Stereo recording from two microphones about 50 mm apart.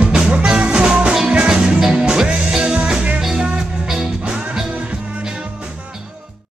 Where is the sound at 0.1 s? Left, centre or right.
Centre.